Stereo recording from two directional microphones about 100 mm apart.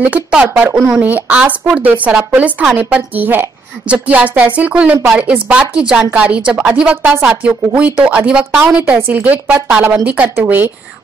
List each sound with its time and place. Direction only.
0.0 s a woman's voice: 15° right (ahead or behind)